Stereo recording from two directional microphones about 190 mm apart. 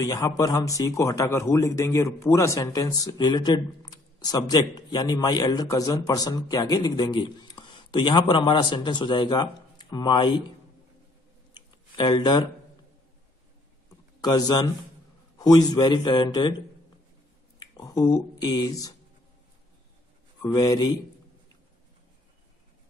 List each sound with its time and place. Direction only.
0.0 s a man's voice: 20° left (ahead or behind)
11.5 s a sound: 25° left (ahead or behind)
14.2 s a man's voice: 20° left (ahead or behind)
17.6 s speech: 20° left (ahead or behind)
20.4 s a man's voice: 20° left (ahead or behind)